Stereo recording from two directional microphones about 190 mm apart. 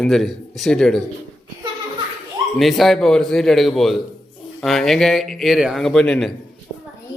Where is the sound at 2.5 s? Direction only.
Centre (ahead or behind).